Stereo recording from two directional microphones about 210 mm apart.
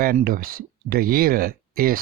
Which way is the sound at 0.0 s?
45° right (ahead or behind).